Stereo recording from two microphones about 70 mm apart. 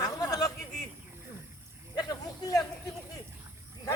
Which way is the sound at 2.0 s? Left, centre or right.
Left.